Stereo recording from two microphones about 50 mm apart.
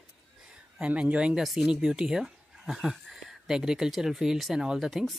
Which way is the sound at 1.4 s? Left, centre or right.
Centre.